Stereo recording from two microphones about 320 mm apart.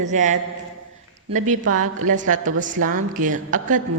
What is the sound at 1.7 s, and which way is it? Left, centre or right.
Speech, right.